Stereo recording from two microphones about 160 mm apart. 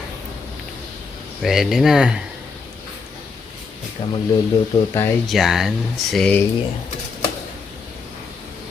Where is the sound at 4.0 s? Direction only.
35° left (ahead or behind).